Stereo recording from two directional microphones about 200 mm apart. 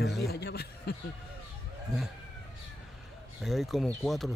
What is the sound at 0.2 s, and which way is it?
Chuckle, 55° left (ahead or behind).